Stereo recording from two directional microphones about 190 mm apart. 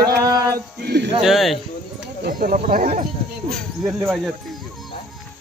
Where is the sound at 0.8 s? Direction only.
65° right (ahead or behind).